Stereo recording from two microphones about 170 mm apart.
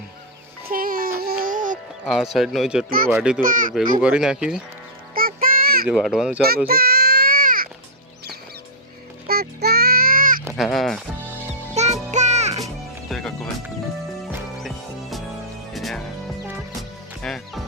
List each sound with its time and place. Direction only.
0.7 s music: 55° right (ahead or behind)
2.0 s speech: centre (ahead or behind)
3.4 s speech: 50° right (ahead or behind)
4.0 s speech: 5° right (ahead or behind)
5.1 s a sound: 60° right (ahead or behind)
5.9 s speech: 5° right (ahead or behind)
6.7 s a sound: 65° right (ahead or behind)
9.2 s music: 65° right (ahead or behind)
10.6 s speech: centre (ahead or behind)
11.7 s music: 40° right (ahead or behind)
13.1 s music: 5° left (ahead or behind)
15.7 s music: centre (ahead or behind)
17.2 s music: centre (ahead or behind)